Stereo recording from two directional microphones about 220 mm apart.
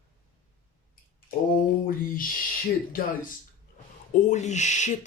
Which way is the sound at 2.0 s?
40° left (ahead or behind).